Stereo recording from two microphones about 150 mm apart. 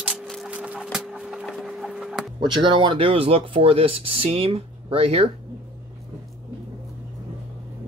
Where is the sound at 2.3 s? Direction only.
30° right (ahead or behind).